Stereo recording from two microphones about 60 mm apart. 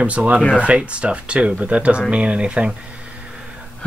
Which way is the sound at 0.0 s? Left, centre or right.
Right.